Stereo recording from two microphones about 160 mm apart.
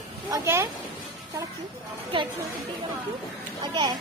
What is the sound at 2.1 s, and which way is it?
Speech, 35° right (ahead or behind).